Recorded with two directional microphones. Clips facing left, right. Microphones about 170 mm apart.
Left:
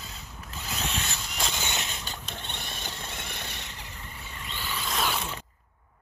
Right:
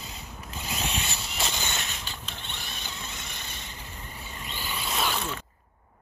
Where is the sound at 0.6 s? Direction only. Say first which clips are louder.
Right 1 dB; 10° right (ahead or behind).